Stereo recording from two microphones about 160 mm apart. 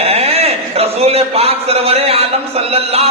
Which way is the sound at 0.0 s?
40° right (ahead or behind).